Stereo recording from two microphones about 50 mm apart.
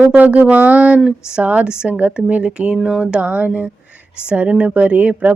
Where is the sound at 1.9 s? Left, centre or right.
Right.